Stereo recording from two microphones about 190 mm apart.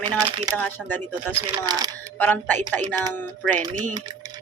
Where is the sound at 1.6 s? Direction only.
20° right (ahead or behind).